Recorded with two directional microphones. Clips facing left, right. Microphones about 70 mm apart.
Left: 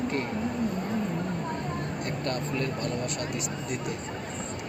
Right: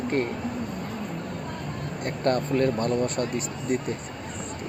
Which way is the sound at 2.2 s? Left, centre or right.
Right.